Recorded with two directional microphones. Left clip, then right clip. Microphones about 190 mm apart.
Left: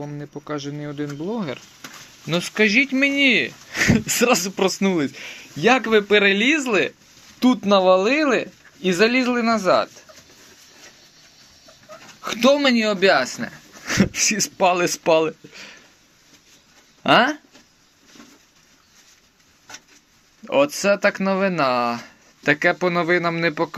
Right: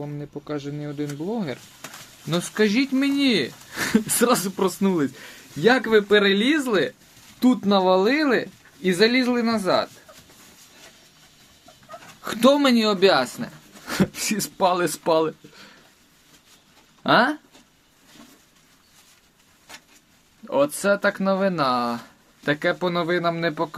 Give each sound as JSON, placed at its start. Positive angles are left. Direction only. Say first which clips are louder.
{"t": 0.0, "sound": "speech", "louder": "left 1 dB", "side_deg": -5}
{"t": 2.3, "sound": "speech", "louder": "left 4 dB", "side_deg": -5}
{"t": 12.2, "sound": "speech", "louder": "left 1 dB", "side_deg": -20}
{"t": 13.4, "sound": "speech", "louder": "left 4 dB", "side_deg": 0}
{"t": 17.0, "sound": "speech", "louder": "left 2 dB", "side_deg": 5}
{"t": 20.7, "sound": "speech", "louder": "left 3 dB", "side_deg": 5}